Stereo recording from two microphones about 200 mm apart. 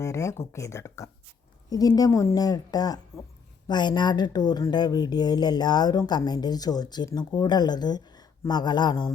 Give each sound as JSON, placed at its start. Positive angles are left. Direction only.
{"t": 0.0, "sound": "a woman's voice", "side_deg": 15}